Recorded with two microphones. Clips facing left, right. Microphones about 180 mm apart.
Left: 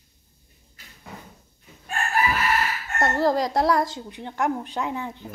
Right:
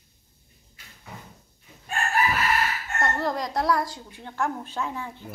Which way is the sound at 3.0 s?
35° left (ahead or behind).